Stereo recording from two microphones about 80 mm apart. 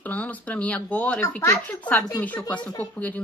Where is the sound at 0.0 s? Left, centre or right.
Centre.